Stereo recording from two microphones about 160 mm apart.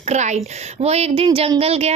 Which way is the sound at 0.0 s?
45° right (ahead or behind).